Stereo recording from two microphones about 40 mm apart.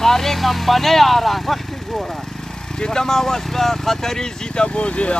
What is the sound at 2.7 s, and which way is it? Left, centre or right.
Speech, centre.